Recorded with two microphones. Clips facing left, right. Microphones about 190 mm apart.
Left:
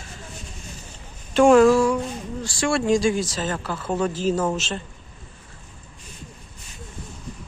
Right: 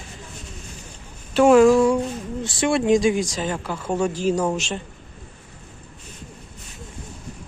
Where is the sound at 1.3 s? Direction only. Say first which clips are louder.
Right 1 dB; 5° right (ahead or behind).